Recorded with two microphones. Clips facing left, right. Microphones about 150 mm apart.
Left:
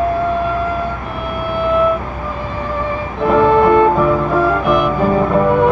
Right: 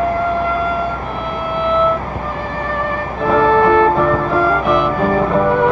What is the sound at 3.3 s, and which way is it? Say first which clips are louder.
Music: left 1 dB; 10° left (ahead or behind).